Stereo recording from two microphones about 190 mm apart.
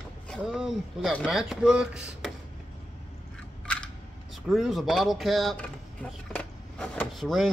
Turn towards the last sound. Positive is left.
turn(degrees=0)  # may be behind; listen again after turning